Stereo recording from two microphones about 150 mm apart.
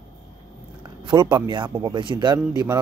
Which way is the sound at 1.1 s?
30° right (ahead or behind).